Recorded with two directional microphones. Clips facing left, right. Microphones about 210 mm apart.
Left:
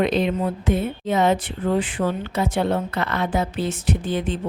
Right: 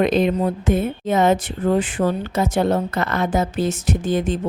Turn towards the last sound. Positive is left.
turn(degrees=-45)  # may be behind; listen again after turning